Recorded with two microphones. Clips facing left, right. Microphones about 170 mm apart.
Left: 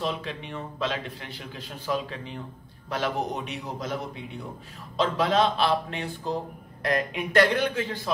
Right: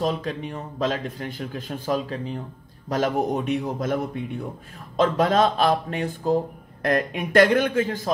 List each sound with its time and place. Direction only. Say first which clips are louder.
0.0 s a man's voice: right 5 dB; 45° right (ahead or behind)